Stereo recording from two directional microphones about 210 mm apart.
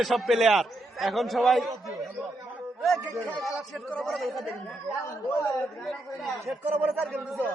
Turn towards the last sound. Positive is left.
turn(degrees=0)  # may be behind; listen again after turning